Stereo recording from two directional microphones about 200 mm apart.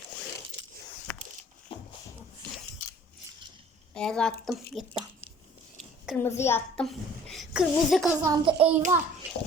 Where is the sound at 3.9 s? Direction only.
5° left (ahead or behind).